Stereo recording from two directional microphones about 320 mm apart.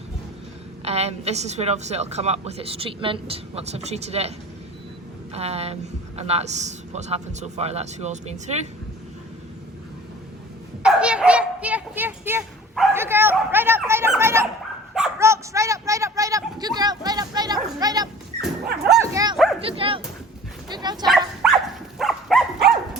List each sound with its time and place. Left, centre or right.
0.9 s a woman's voice: centre
5.3 s a woman's voice: centre
10.8 s bow-wow: centre
14.9 s dog: centre
18.6 s dog: right
18.9 s dog: centre
19.6 s speech: centre
21.4 s dog: centre